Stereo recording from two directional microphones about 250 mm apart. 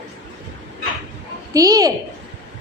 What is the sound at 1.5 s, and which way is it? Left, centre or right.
Speech, centre.